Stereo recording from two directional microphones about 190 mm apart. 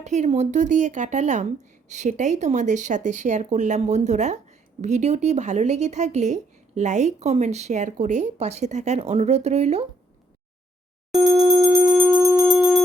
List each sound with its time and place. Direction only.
0.0 s speech: 35° right (ahead or behind)
11.3 s music: 20° right (ahead or behind); by 12.8 s 5° right (ahead or behind)